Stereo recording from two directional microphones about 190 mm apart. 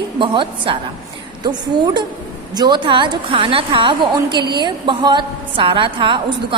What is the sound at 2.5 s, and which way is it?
A woman's voice, 20° right (ahead or behind).